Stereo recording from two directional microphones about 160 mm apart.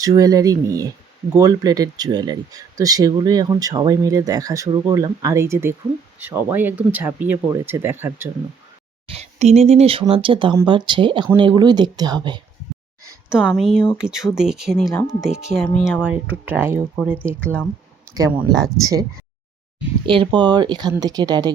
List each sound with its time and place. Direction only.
0.0 s speech: 20° right (ahead or behind)
9.0 s speech: 40° right (ahead or behind)
13.3 s speech: 5° right (ahead or behind)
14.8 s speech: 20° left (ahead or behind)
15.2 s speech: 5° right (ahead or behind)
17.4 s speech: 10° left (ahead or behind)
18.8 s speech: 20° right (ahead or behind)
20.1 s speech: 30° right (ahead or behind)